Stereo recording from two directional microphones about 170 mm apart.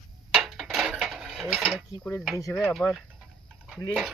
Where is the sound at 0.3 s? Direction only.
Centre (ahead or behind).